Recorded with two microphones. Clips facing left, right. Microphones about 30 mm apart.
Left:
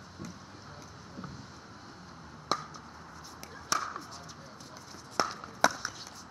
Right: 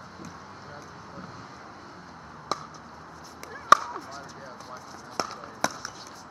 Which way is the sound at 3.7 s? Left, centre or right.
Right.